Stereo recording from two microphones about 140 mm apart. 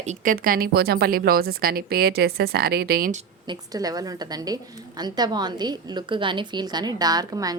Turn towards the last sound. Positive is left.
turn(degrees=-25)  # may be behind; listen again after turning